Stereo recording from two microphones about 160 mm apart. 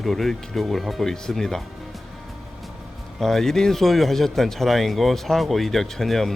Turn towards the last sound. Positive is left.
turn(degrees=0)  # may be behind; listen again after turning